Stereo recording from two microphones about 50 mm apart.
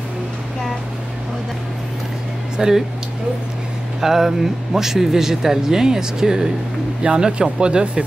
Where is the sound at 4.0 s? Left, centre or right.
Centre.